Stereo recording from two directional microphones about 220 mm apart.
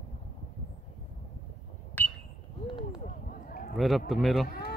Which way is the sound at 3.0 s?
40° left (ahead or behind).